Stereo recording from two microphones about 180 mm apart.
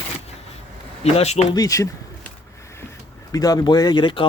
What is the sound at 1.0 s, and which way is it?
Speech, 35° left (ahead or behind).